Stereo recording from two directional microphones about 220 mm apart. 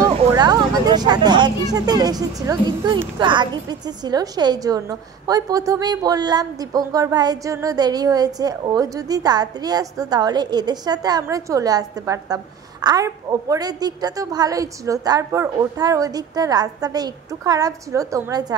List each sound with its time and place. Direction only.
0.0 s speech: 20° right (ahead or behind)